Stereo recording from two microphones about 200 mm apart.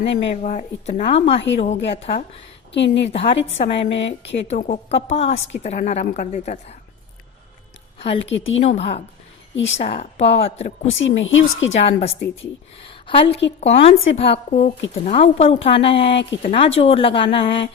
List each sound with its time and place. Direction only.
0.0 s a woman's voice: 35° left (ahead or behind)
3.9 s speech: 60° left (ahead or behind)
4.4 s a woman's voice: 35° left (ahead or behind)
7.9 s a woman's voice: 30° left (ahead or behind)
8.2 s speech: 65° left (ahead or behind)
8.6 s a woman's voice: 30° left (ahead or behind)
10.8 s speech: 70° left (ahead or behind)
11.8 s a woman's voice: 30° left (ahead or behind)